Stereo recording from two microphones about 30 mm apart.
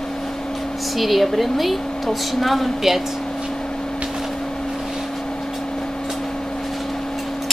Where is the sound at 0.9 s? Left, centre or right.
Centre.